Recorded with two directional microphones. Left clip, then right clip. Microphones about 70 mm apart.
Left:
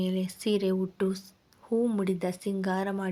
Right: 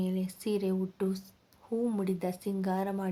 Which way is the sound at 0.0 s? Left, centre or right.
Left.